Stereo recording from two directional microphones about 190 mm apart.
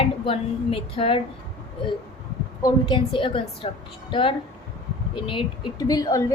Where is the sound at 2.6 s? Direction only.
25° left (ahead or behind).